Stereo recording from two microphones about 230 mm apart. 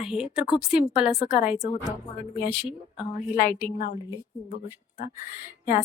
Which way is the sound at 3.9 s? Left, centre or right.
Left.